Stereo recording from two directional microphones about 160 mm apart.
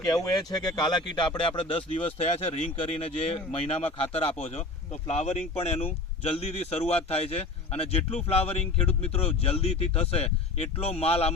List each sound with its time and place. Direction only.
0.1 s speech: 25° left (ahead or behind); by 11.3 s 40° left (ahead or behind)